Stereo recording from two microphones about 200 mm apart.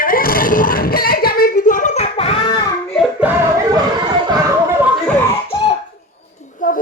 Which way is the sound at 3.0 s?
5° right (ahead or behind).